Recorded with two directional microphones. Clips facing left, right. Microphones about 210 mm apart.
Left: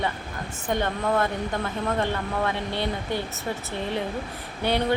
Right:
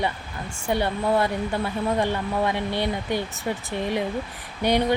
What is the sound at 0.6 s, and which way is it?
Speech, 10° right (ahead or behind).